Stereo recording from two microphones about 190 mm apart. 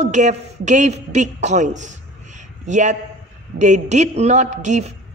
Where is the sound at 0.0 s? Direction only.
40° right (ahead or behind).